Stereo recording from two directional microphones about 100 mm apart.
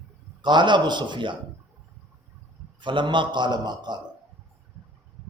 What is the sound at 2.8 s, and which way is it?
A man's voice, 55° right (ahead or behind).